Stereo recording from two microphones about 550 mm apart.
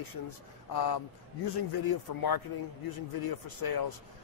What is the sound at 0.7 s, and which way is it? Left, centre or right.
A man's voice, left.